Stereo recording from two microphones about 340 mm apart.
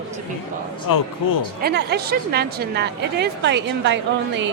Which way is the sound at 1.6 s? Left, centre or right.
Right.